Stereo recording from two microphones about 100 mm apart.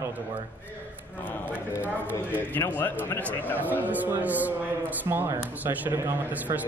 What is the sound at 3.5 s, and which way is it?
A man's voice, 15° right (ahead or behind).